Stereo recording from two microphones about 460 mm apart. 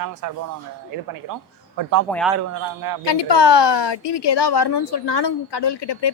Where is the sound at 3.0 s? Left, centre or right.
Left.